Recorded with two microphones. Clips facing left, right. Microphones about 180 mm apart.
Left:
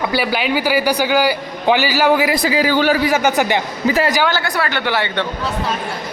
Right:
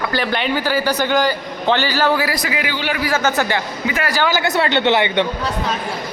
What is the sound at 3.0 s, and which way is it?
Speech, 15° left (ahead or behind).